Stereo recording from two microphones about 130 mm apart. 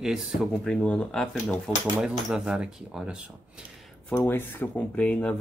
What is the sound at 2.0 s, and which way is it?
Speech, 5° right (ahead or behind).